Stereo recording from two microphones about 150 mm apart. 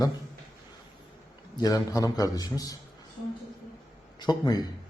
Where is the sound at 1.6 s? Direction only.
25° left (ahead or behind).